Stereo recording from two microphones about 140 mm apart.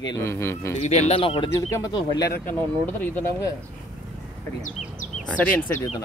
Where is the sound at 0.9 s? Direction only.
50° left (ahead or behind).